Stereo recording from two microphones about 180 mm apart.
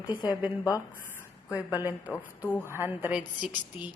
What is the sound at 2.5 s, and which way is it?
Speech, 10° left (ahead or behind).